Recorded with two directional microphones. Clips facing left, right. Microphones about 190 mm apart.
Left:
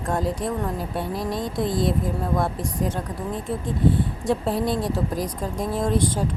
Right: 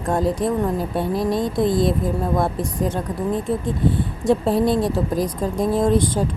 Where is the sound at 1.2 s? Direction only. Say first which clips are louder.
Right 6 dB; 25° right (ahead or behind).